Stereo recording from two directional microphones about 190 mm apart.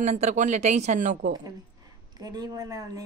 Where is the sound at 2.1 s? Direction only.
20° right (ahead or behind).